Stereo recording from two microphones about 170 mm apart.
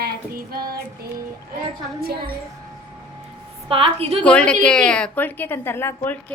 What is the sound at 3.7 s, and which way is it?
Speech, 35° right (ahead or behind).